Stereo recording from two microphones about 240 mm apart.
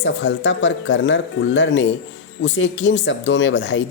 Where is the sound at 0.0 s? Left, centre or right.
Left.